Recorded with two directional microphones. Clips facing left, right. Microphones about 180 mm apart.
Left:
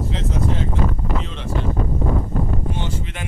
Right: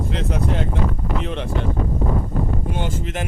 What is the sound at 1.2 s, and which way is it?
Speech, 60° right (ahead or behind).